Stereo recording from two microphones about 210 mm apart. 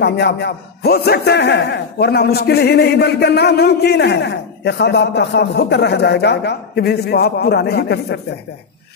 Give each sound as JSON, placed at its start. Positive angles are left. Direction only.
{"t": 0.0, "sound": "speech", "side_deg": 55}